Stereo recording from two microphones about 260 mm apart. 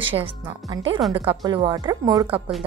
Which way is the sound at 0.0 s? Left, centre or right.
Right.